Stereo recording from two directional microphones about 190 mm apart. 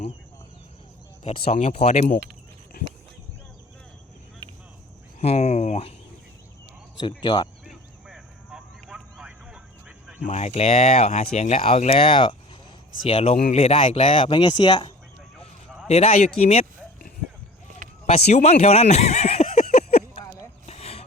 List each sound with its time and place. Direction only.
1.2 s speech: 35° left (ahead or behind)
5.2 s speech: 35° left (ahead or behind)
7.2 s speech: 25° left (ahead or behind)
7.6 s vehicle: centre (ahead or behind)
10.2 s speech: 35° left (ahead or behind)
18.0 s speech: 35° left (ahead or behind)
18.6 s a sound: 35° left (ahead or behind)